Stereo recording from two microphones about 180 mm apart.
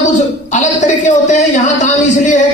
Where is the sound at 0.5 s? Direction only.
45° left (ahead or behind).